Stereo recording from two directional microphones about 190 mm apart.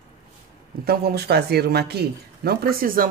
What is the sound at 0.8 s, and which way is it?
Speech, 55° right (ahead or behind).